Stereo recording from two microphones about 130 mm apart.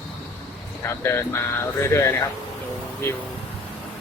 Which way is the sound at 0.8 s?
20° left (ahead or behind).